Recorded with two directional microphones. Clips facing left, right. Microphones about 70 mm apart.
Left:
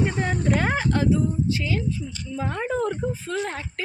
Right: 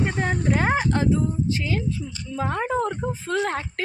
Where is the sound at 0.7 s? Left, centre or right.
Right.